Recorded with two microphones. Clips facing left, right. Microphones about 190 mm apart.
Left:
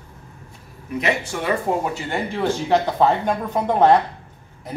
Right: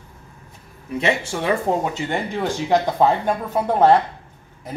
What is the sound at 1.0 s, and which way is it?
Speech, 25° right (ahead or behind).